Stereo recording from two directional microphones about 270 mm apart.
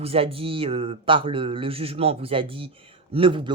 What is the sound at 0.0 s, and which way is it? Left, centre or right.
Speech, right.